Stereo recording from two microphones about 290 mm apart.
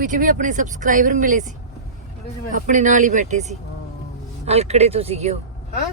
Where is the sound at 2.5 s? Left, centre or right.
Right.